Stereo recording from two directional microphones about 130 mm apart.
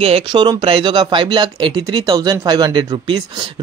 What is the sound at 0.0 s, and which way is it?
Speech, 45° right (ahead or behind).